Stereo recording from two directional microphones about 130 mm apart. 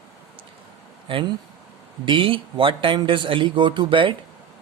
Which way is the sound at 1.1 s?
45° right (ahead or behind).